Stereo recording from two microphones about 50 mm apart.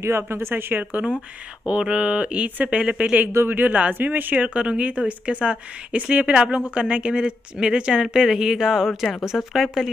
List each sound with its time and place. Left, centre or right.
0.0 s speech: right
1.7 s a woman's voice: right
3.4 s speech: right
4.6 s a woman's voice: right; by 9.8 s centre